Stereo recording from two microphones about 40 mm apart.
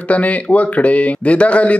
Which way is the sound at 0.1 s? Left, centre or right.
Left.